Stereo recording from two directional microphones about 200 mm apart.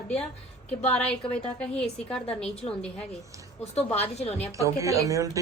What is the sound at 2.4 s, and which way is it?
Speech, 5° left (ahead or behind).